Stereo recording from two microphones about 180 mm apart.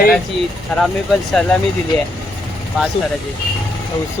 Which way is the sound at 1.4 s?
5° left (ahead or behind).